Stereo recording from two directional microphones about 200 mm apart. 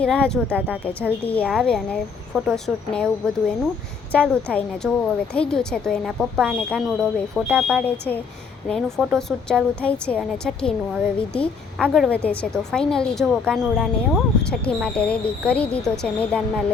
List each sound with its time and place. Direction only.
0.0 s speech: 5° left (ahead or behind)
7.9 s speech: 10° left (ahead or behind)